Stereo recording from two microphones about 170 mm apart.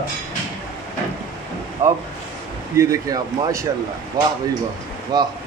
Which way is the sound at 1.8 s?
15° right (ahead or behind).